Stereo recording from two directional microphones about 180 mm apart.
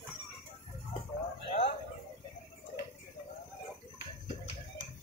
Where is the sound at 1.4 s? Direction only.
35° left (ahead or behind).